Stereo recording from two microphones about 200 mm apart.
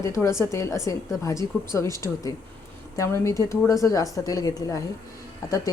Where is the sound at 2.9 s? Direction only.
15° left (ahead or behind).